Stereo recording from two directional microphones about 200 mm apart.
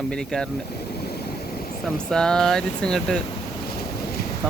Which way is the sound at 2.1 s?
5° left (ahead or behind).